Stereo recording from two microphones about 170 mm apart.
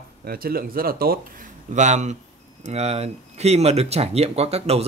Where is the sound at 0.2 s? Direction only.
60° right (ahead or behind).